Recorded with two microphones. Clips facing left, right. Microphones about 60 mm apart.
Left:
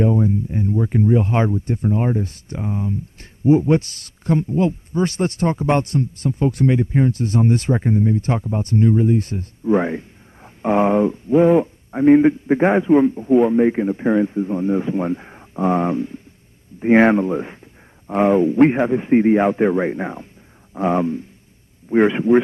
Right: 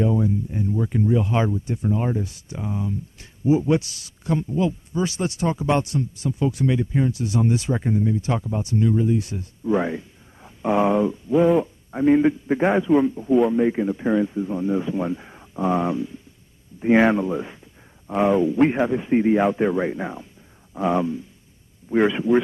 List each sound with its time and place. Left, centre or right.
0.0 s speech: left
15.6 s speech: left